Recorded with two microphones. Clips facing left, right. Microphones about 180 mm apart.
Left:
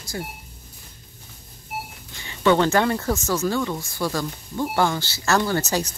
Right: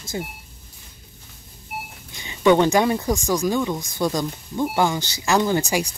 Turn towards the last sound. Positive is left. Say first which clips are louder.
# right 2 dB
turn(degrees=-15)  # may be behind; listen again after turning